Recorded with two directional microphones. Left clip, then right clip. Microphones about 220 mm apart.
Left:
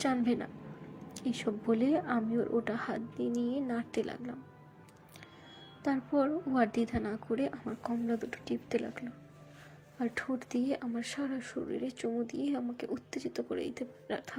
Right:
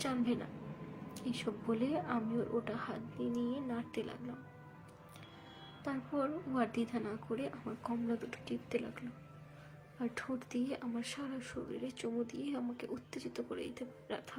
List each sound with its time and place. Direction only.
0.0 s a woman's voice: 20° left (ahead or behind)
5.8 s a woman's voice: 20° left (ahead or behind)